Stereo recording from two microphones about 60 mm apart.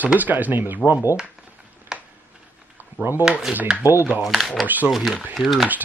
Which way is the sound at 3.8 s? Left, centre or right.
Right.